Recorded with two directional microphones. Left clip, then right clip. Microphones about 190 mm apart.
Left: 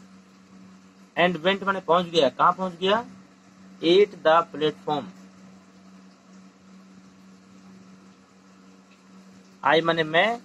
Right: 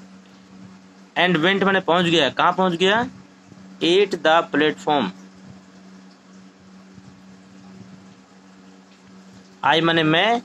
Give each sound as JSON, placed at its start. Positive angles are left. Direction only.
{"t": 1.5, "sound": "speech", "side_deg": -45}
{"t": 9.6, "sound": "speech", "side_deg": -35}